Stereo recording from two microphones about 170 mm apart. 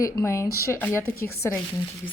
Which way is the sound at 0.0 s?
15° left (ahead or behind).